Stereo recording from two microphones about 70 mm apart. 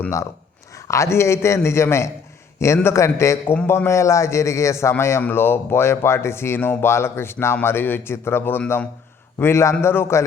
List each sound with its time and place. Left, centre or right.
0.9 s a man's voice: left